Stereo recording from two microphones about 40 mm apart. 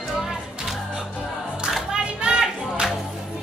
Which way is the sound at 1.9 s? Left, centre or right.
Right.